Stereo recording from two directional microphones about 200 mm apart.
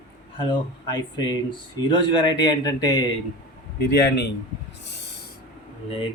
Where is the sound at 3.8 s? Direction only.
55° left (ahead or behind).